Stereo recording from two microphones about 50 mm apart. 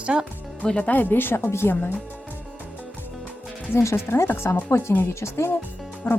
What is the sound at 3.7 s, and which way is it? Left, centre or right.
Speech, left.